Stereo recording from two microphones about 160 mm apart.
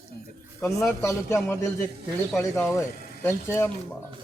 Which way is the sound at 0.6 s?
15° left (ahead or behind).